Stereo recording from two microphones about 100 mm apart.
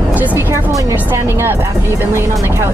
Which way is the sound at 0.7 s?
35° right (ahead or behind).